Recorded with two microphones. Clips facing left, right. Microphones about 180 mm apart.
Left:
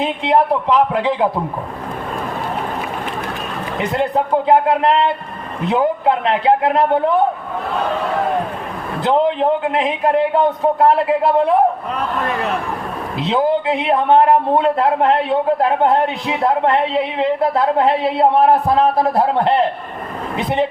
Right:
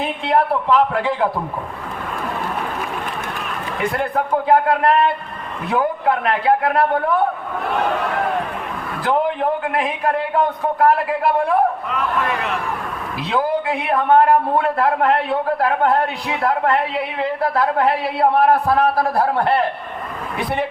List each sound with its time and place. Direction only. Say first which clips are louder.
0.0 s a man's voice: left 3 dB; 20° left (ahead or behind)
3.8 s a man's voice: left 3 dB; 20° left (ahead or behind)
9.0 s a man's voice: left 4 dB; 20° left (ahead or behind)
11.9 s speech: left 1 dB; 40° left (ahead or behind)
13.1 s a man's voice: left 4 dB; 20° left (ahead or behind)